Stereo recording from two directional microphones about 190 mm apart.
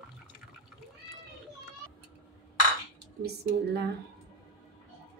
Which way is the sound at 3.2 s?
60° right (ahead or behind).